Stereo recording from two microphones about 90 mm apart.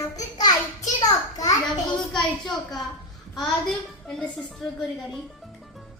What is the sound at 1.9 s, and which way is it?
A woman's voice, 5° left (ahead or behind).